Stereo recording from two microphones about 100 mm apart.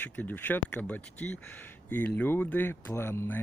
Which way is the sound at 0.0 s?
15° left (ahead or behind).